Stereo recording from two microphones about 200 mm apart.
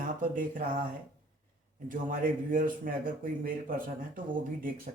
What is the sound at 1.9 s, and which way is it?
Speech, 45° right (ahead or behind).